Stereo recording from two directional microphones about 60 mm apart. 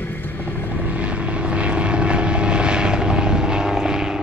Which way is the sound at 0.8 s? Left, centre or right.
Right.